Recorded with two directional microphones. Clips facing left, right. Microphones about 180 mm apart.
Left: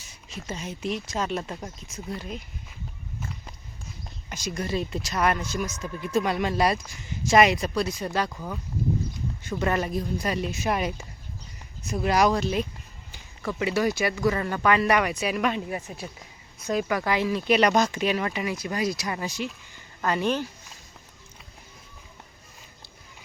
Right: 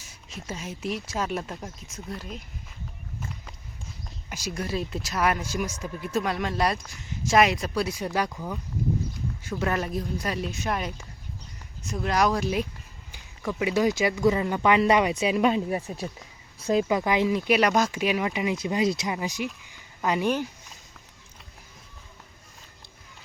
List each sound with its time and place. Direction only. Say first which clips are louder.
0.3 s speech: left 1 dB; centre (ahead or behind)
4.3 s speech: left 1 dB; 5° right (ahead or behind)
8.3 s speech: right 1 dB; centre (ahead or behind)
12.4 s speech: even; 10° right (ahead or behind)